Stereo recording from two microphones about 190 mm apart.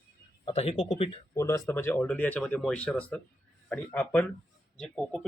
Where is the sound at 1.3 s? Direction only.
15° left (ahead or behind).